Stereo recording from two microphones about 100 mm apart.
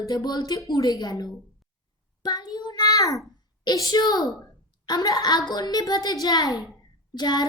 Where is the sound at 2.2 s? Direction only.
45° left (ahead or behind).